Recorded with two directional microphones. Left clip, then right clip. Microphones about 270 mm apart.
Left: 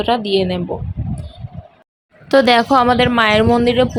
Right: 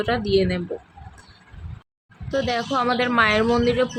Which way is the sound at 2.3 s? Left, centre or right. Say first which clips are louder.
Left 12 dB; left.